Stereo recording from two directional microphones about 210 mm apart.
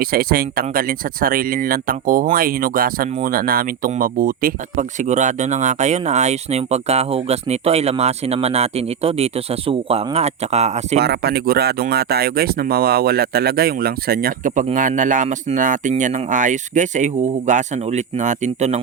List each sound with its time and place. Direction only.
0.0 s speech: 45° right (ahead or behind)
11.0 s speech: 50° right (ahead or behind); by 18.8 s 35° right (ahead or behind)